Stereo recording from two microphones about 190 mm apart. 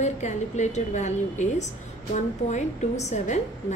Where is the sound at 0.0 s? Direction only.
40° left (ahead or behind).